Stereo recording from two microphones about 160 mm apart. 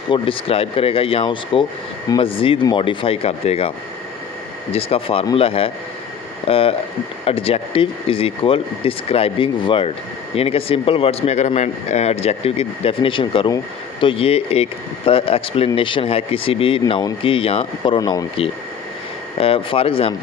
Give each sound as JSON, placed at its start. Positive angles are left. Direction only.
{"t": 0.1, "sound": "speech", "side_deg": 35}
{"t": 4.7, "sound": "speech", "side_deg": 35}
{"t": 16.8, "sound": "speech", "side_deg": 25}
{"t": 17.2, "sound": "speech", "side_deg": 35}
{"t": 19.4, "sound": "speech", "side_deg": 35}